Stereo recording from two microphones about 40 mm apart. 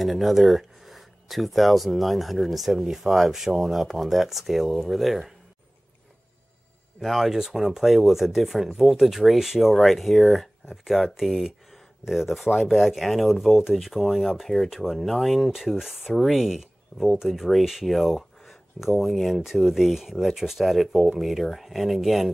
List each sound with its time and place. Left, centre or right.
0.0 s speech: centre
7.0 s speech: centre